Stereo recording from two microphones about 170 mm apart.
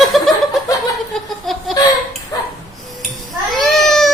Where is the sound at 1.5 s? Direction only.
Centre (ahead or behind).